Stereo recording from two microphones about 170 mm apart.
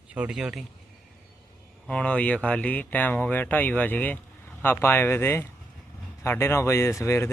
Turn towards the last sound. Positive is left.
turn(degrees=15)  # may be behind; listen again after turning